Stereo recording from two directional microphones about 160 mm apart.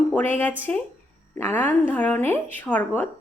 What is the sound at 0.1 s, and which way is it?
A woman's voice, 10° left (ahead or behind).